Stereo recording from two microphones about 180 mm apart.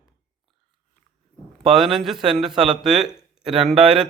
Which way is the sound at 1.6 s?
Centre (ahead or behind).